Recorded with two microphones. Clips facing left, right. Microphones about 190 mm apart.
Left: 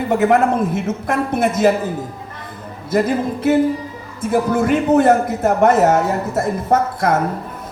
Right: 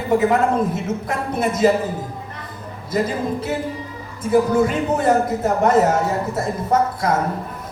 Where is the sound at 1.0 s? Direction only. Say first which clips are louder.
Left 6 dB; 55° left (ahead or behind).